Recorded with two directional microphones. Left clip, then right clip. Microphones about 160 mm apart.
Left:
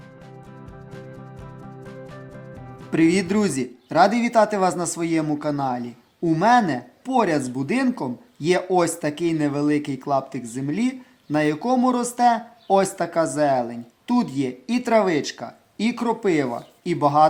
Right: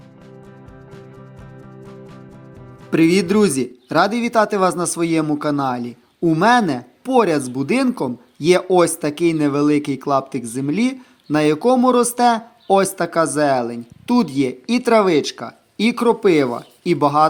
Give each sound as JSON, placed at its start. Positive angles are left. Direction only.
{"t": 1.8, "sound": "music", "side_deg": 0}
{"t": 2.9, "sound": "speech", "side_deg": -20}